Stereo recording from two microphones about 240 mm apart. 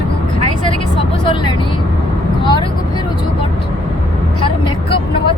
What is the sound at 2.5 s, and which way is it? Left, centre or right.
Vehicle, centre.